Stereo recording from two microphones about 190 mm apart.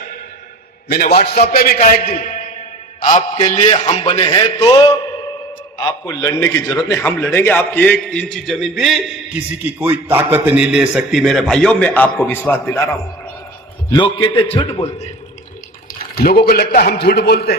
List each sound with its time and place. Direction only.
0.9 s a man's voice: 55° left (ahead or behind)
1.8 s a man's voice: 45° left (ahead or behind); by 13.0 s 15° left (ahead or behind)
13.9 s a man's voice: 25° left (ahead or behind)
16.1 s a man's voice: 55° left (ahead or behind)